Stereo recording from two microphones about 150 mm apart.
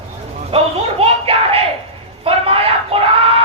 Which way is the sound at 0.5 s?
40° right (ahead or behind).